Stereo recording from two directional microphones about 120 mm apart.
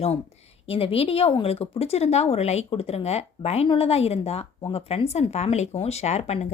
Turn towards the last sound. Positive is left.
turn(degrees=65)  # may be behind; listen again after turning